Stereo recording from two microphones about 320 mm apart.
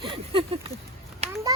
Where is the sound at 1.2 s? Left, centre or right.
Centre.